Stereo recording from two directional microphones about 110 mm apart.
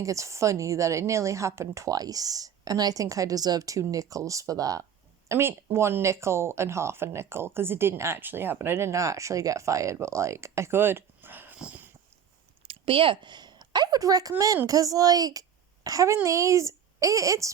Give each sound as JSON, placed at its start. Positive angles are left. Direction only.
{"t": 0.0, "sound": "a woman's voice", "side_deg": -30}
{"t": 5.3, "sound": "speech", "side_deg": -25}
{"t": 12.6, "sound": "a sound", "side_deg": -55}
{"t": 14.7, "sound": "a woman's voice", "side_deg": -30}